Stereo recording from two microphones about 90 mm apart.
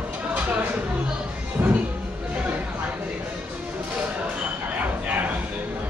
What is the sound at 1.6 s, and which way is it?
Music, 20° right (ahead or behind).